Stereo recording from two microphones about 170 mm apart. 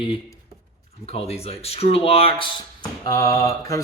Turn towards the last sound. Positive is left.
turn(degrees=20)  # may be behind; listen again after turning